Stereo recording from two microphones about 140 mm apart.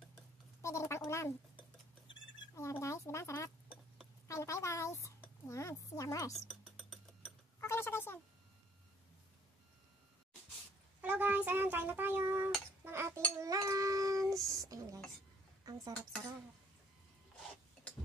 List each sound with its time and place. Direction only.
0.1 s a sound: 20° left (ahead or behind)
2.5 s speech: 20° left (ahead or behind)
6.4 s a sound: centre (ahead or behind)
7.6 s speech: 15° left (ahead or behind)
11.0 s speech: 10° right (ahead or behind)
12.8 s dishes: 20° right (ahead or behind)